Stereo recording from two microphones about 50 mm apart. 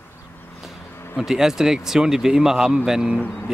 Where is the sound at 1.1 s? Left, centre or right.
Centre.